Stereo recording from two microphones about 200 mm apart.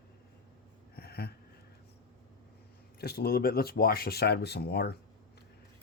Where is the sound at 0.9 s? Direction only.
50° left (ahead or behind).